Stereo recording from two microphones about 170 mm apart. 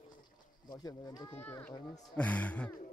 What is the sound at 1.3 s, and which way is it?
Speech, 10° left (ahead or behind).